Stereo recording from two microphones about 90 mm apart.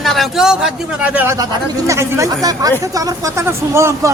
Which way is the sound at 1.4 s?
35° right (ahead or behind).